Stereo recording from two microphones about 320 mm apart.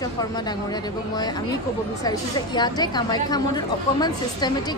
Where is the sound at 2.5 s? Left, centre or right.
Centre.